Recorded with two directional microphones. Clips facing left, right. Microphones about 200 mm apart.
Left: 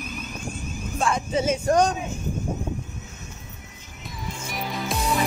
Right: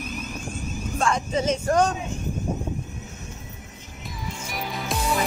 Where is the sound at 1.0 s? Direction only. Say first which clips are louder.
Even; 5° left (ahead or behind).